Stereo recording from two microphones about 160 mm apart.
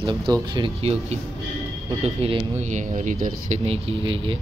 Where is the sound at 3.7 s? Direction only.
35° right (ahead or behind).